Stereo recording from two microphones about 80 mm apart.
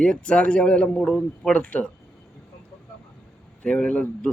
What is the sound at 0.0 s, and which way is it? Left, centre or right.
Speech, centre.